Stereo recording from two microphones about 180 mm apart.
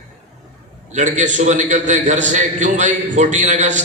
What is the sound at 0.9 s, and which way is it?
A man's voice, 40° right (ahead or behind).